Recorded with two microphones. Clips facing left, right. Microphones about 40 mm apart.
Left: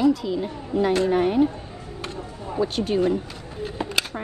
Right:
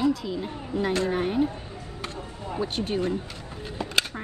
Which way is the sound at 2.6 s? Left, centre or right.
Right.